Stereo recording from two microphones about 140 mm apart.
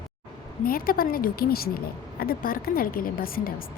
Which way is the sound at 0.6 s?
90° left.